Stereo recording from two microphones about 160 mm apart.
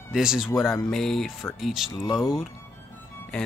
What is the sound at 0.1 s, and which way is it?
Speech, 5° right (ahead or behind).